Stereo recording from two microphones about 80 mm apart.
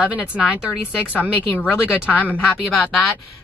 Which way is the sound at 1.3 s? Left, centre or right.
Left.